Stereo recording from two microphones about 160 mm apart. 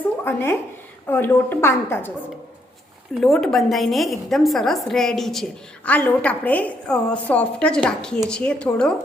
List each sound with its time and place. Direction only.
0.3 s a woman's voice: 15° left (ahead or behind)
3.2 s a woman's voice: centre (ahead or behind)